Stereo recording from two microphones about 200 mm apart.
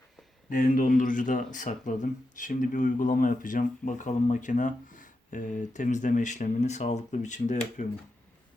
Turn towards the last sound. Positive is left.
turn(degrees=35)  # may be behind; listen again after turning